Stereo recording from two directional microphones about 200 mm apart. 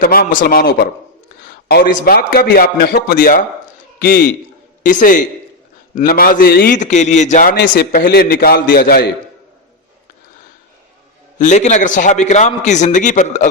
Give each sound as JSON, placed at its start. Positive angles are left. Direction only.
{"t": 0.0, "sound": "a man's voice", "side_deg": 45}
{"t": 6.7, "sound": "a man's voice", "side_deg": 35}
{"t": 7.5, "sound": "a man's voice", "side_deg": 50}
{"t": 11.3, "sound": "a man's voice", "side_deg": 35}